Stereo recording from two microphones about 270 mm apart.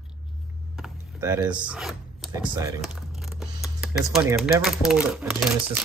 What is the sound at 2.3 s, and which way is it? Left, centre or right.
Speech, centre.